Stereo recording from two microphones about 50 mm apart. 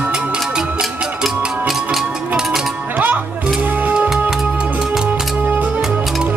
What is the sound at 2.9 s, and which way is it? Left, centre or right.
Music, right.